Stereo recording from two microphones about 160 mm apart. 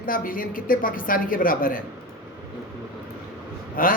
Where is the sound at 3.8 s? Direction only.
65° left (ahead or behind).